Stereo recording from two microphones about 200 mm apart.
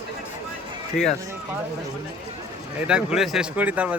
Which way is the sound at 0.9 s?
40° left (ahead or behind).